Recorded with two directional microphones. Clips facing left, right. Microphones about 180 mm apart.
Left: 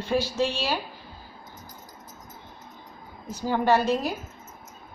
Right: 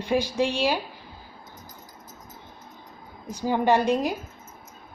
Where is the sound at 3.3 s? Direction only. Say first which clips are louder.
Right 1 dB; 15° right (ahead or behind).